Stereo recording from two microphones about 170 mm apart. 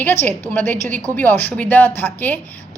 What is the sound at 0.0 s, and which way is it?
A woman's voice, 15° left (ahead or behind).